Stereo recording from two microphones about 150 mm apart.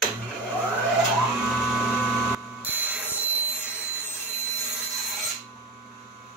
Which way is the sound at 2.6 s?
10° right (ahead or behind).